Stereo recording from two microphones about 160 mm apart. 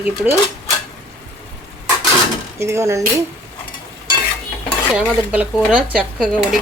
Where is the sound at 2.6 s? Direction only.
15° right (ahead or behind).